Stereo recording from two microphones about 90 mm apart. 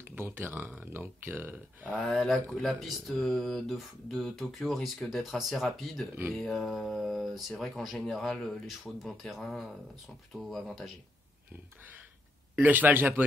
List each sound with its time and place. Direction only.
0.0 s speech: 25° right (ahead or behind)
2.0 s speech: 5° left (ahead or behind)
12.5 s speech: 15° right (ahead or behind)